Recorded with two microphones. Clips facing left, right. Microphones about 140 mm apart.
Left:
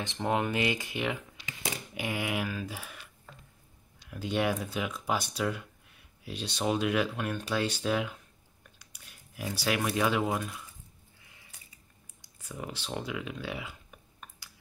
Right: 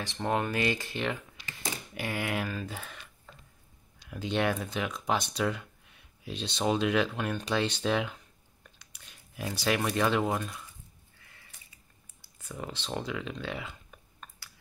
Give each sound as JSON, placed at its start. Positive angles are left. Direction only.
{"t": 0.0, "sound": "speech", "side_deg": 15}
{"t": 4.1, "sound": "speech", "side_deg": 5}
{"t": 12.2, "sound": "clicking", "side_deg": 10}